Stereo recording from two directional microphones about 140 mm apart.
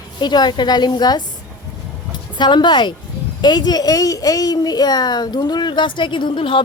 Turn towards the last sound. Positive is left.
turn(degrees=35)  # may be behind; listen again after turning